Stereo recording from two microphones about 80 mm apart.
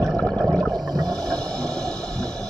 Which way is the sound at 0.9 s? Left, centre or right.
Right.